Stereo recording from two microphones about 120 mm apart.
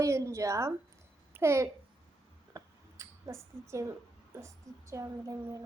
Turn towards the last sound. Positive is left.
turn(degrees=-30)  # may be behind; listen again after turning